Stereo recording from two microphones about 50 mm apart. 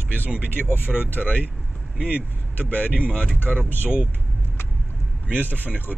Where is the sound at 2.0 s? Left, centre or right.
Right.